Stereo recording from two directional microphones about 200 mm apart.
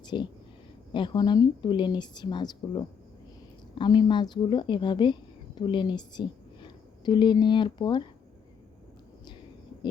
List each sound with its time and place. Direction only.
0.1 s a woman's voice: 25° left (ahead or behind)